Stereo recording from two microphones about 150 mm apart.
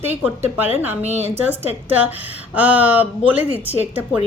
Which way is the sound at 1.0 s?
45° right (ahead or behind).